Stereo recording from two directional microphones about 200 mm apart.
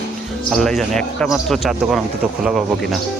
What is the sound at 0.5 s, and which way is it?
Speech, centre (ahead or behind).